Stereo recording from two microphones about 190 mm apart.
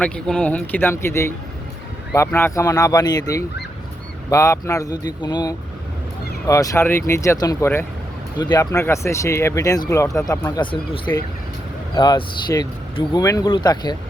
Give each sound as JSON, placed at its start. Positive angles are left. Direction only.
{"t": 0.0, "sound": "speech", "side_deg": 5}